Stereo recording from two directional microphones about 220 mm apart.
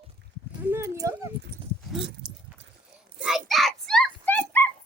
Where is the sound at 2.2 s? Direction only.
50° right (ahead or behind).